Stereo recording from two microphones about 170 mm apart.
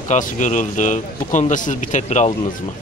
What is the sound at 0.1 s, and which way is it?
Speech, 45° left (ahead or behind).